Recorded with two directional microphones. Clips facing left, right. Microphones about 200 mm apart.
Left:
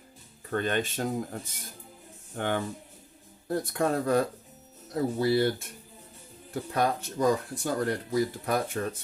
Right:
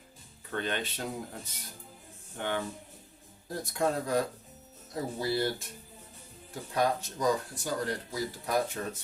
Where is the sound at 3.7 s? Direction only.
60° left (ahead or behind).